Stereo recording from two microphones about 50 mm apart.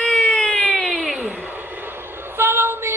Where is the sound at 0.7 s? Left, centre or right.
Centre.